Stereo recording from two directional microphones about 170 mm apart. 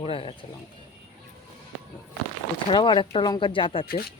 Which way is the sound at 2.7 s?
30° left (ahead or behind).